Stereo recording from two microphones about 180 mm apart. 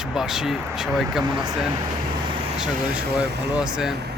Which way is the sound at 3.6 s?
5° right (ahead or behind).